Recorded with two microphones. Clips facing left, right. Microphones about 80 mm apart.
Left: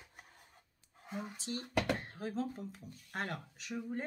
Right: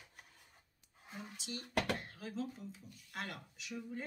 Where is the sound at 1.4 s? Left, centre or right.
Left.